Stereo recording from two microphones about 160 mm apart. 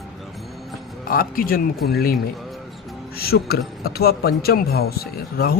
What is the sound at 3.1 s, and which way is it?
A man's voice, 75° left (ahead or behind).